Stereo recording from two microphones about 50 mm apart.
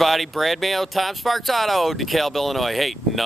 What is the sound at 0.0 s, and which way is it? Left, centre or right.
Speech, centre.